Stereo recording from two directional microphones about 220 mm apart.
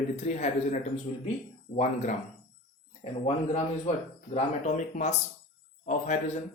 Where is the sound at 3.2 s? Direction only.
30° left (ahead or behind).